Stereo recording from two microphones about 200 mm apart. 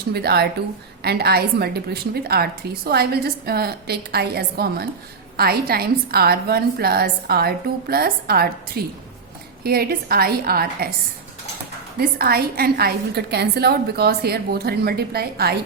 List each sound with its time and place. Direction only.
0.1 s a woman's voice: 55° right (ahead or behind)
11.9 s a woman's voice: 50° right (ahead or behind)